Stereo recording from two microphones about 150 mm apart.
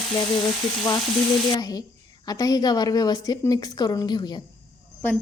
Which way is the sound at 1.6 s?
25° left (ahead or behind).